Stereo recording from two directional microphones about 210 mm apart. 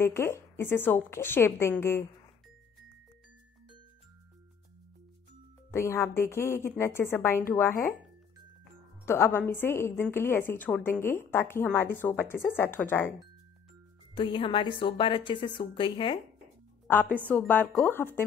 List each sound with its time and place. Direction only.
0.0 s a woman's voice: 10° left (ahead or behind)
5.7 s a woman's voice: 10° left (ahead or behind)
9.0 s a woman's voice: 10° left (ahead or behind)
14.1 s a woman's voice: 25° left (ahead or behind)
16.8 s a woman's voice: 10° left (ahead or behind)